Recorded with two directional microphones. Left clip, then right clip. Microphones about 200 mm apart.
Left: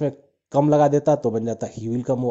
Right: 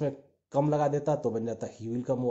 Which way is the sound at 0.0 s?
35° left (ahead or behind).